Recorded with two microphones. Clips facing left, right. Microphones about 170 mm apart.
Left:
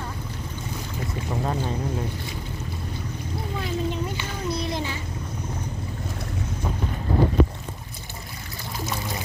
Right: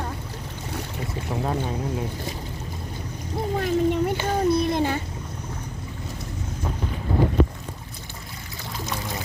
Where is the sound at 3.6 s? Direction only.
55° right (ahead or behind).